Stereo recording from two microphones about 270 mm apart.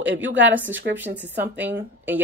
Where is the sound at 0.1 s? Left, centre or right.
Right.